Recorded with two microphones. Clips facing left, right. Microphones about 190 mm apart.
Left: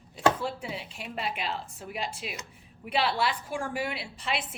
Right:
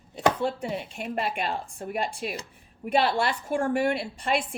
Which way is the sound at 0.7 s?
50° right (ahead or behind).